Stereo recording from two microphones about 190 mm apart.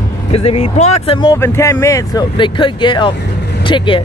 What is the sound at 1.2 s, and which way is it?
Speech, 15° left (ahead or behind).